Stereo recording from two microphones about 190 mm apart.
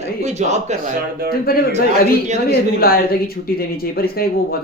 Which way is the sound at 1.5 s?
50° left (ahead or behind).